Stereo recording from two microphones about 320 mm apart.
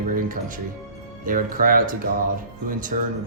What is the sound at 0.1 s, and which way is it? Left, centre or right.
Music, right.